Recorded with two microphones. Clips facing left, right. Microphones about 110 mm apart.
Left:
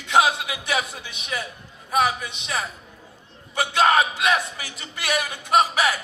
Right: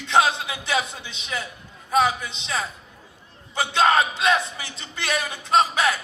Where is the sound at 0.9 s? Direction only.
25° right (ahead or behind).